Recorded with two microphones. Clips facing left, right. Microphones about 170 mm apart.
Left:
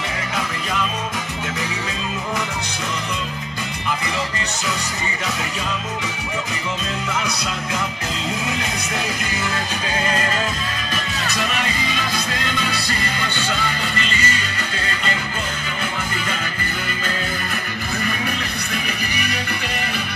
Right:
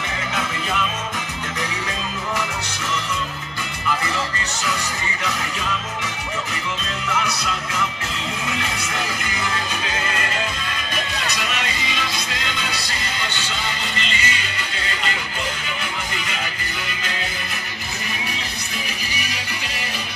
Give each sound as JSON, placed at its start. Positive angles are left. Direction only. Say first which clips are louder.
{"t": 11.3, "sound": "music", "louder": "left 3 dB", "side_deg": 45}